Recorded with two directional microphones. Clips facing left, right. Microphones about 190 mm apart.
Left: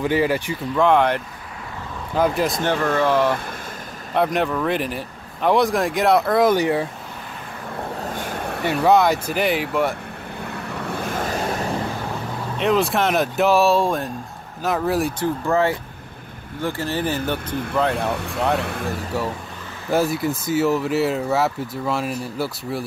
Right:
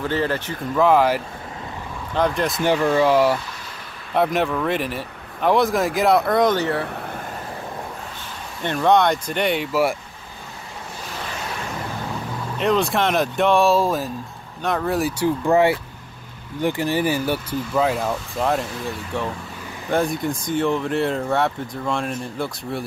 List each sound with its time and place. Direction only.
0.0 s speech: 10° left (ahead or behind)
0.7 s speech: 5° right (ahead or behind)
2.1 s speech: 5° left (ahead or behind)
2.6 s speech: 10° right (ahead or behind); by 6.9 s 15° left (ahead or behind)
8.1 s a sound: 55° left (ahead or behind)
8.8 s speech: 5° left (ahead or behind)
10.4 s vehicle: 65° left (ahead or behind); by 11.6 s 45° left (ahead or behind)
12.5 s speech: centre (ahead or behind)
15.4 s speech: 15° right (ahead or behind)
18.1 s speech: 65° left (ahead or behind)
19.9 s speech: 5° left (ahead or behind)